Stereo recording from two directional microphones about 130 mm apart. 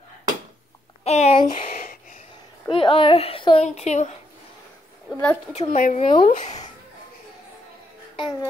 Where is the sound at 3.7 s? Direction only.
60° left (ahead or behind).